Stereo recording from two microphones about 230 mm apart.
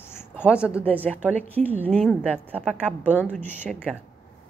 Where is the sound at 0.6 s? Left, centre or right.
Centre.